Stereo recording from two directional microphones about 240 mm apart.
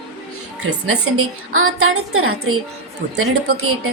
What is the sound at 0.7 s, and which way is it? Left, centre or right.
A woman's voice, right.